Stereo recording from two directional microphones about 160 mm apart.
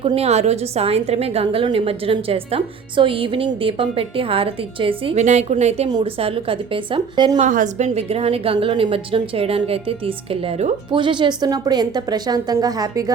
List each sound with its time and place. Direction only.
0.0 s a woman's voice: 35° right (ahead or behind)
5.2 s a woman's voice: 45° right (ahead or behind)
5.9 s a woman's voice: 30° right (ahead or behind)
7.3 s a woman's voice: 50° right (ahead or behind)
10.9 s a woman's voice: 30° right (ahead or behind)